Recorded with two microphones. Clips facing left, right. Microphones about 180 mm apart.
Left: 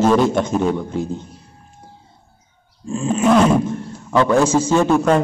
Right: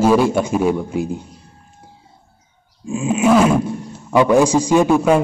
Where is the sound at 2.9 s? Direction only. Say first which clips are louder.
Right 1 dB; 10° right (ahead or behind).